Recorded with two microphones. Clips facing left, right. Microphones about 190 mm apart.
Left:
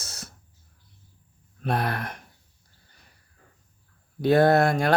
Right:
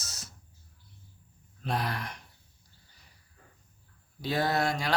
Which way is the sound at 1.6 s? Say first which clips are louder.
Left 5 dB; 55° left (ahead or behind).